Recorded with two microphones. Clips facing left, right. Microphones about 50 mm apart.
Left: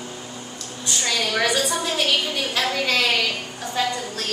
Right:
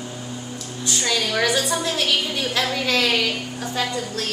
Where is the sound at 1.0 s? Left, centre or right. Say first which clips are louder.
Right 1 dB; centre.